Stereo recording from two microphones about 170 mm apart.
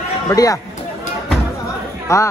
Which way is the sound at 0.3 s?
20° left (ahead or behind).